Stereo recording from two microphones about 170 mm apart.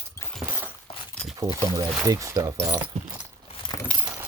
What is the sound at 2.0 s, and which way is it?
Speech, 20° right (ahead or behind).